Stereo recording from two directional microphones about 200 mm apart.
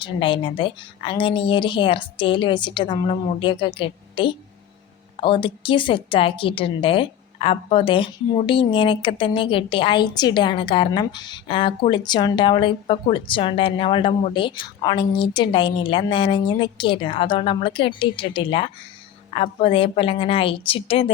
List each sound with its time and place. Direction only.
0.0 s a woman's voice: 25° left (ahead or behind)